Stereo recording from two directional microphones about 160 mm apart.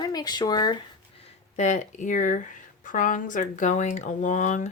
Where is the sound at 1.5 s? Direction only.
50° left (ahead or behind).